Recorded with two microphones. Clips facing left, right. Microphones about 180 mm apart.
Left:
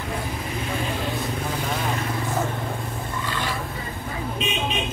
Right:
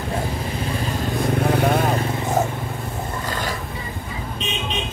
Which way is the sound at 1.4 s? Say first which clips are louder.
Right 9 dB; 65° right (ahead or behind).